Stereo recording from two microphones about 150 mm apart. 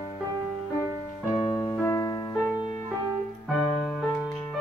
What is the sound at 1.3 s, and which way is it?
Music, 35° left (ahead or behind).